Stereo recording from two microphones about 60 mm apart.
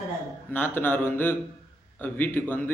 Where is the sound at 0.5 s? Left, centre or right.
Left.